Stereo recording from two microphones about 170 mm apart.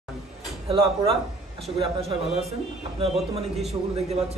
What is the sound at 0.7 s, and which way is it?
A man's voice, 35° right (ahead or behind).